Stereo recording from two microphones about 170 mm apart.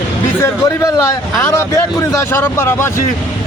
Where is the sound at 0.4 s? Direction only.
15° left (ahead or behind).